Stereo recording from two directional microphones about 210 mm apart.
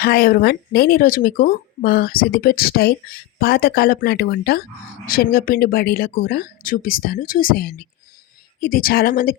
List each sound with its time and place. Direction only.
0.0 s speech: 45° left (ahead or behind)